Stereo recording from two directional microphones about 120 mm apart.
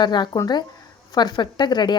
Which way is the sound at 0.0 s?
40° left (ahead or behind).